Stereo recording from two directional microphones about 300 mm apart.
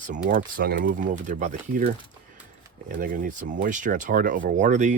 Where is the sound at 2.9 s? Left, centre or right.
Right.